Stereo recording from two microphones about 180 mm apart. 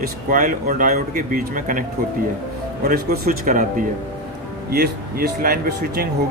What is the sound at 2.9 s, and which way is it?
Speech, 60° right (ahead or behind).